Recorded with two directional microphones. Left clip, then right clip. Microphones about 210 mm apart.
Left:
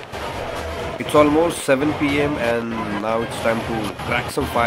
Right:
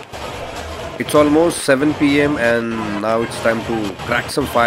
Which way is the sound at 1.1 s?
20° right (ahead or behind).